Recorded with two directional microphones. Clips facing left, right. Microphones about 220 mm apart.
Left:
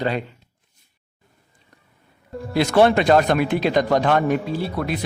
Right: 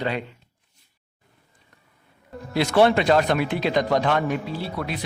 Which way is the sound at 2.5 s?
45° left (ahead or behind).